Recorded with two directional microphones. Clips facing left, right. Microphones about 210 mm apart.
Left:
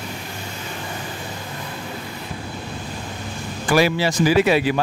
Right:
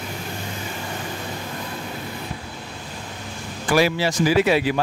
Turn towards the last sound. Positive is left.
turn(degrees=60)  # may be behind; listen again after turning